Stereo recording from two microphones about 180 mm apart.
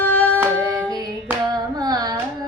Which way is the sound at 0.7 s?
20° right (ahead or behind).